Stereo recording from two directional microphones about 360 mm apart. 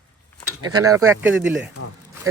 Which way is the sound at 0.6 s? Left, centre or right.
Centre.